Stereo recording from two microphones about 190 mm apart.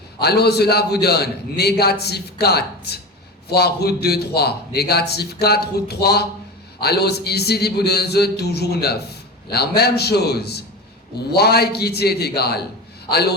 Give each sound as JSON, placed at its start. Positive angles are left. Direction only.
{"t": 0.2, "sound": "a man's voice", "side_deg": 60}